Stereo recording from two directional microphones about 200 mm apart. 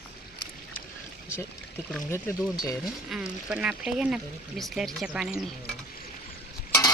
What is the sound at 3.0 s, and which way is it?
Speech, 5° right (ahead or behind).